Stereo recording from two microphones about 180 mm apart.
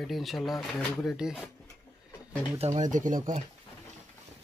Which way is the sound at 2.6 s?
40° right (ahead or behind).